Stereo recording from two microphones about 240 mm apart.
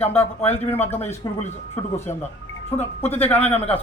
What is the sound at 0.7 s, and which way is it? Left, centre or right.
Speech, centre.